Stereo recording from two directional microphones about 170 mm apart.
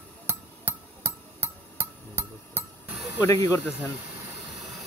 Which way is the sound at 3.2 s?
20° left (ahead or behind).